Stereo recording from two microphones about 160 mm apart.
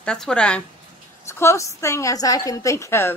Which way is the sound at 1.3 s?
15° left (ahead or behind).